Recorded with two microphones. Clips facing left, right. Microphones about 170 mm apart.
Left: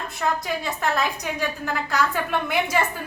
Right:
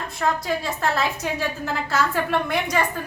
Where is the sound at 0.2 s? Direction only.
Centre (ahead or behind).